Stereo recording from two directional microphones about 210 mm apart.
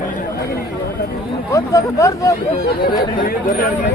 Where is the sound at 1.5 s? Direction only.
15° left (ahead or behind).